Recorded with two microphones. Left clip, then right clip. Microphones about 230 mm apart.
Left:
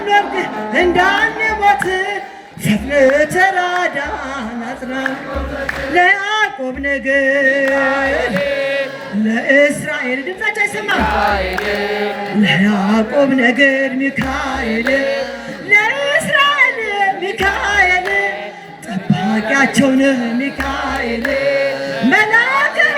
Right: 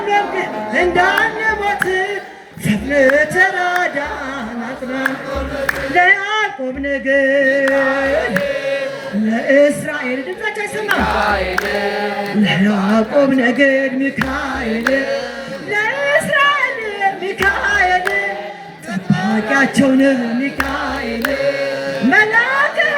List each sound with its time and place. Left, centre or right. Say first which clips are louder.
0.1 s a man's voice: left 3 dB; left
5.9 s a sound: left 1 dB; left
7.7 s a man's voice: even; left
9.3 s a man's voice: even; left
12.4 s a man's voice: left 3 dB; left
14.9 s carnatic music: left 3 dB; centre
15.7 s a sound: left 3 dB; left
17.7 s music: left 3 dB; left
19.1 s a man's voice: even; left
21.4 s music: left 4 dB; centre
22.1 s a sound: left 1 dB; left